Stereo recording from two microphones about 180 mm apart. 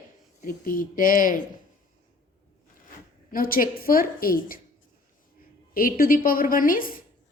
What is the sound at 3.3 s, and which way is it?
A woman's voice, 50° left (ahead or behind).